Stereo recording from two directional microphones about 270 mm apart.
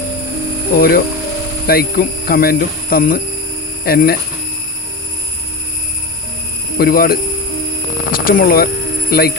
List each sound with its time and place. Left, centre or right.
0.8 s speech: left
6.7 s speech: left